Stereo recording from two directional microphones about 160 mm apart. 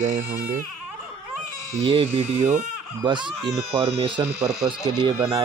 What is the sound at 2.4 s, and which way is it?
Speech, 15° right (ahead or behind).